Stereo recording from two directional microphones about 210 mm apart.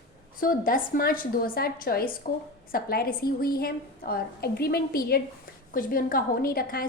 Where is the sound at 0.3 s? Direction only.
40° left (ahead or behind).